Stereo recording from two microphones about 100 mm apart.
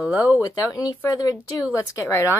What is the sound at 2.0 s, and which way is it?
Speech, 25° left (ahead or behind).